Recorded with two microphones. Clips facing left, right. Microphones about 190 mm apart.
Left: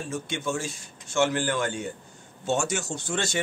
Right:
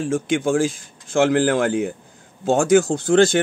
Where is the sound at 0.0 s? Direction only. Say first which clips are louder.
Right 11 dB; 90° right.